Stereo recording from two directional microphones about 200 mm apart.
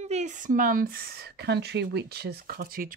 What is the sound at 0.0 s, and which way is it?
Speech, 35° right (ahead or behind).